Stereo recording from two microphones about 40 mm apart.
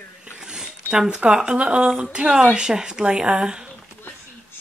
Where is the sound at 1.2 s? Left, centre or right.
Right.